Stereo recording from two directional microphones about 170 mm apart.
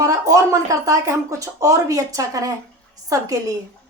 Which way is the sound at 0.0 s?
20° right (ahead or behind).